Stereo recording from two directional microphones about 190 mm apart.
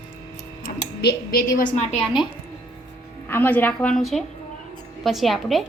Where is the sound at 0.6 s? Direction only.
50° left (ahead or behind).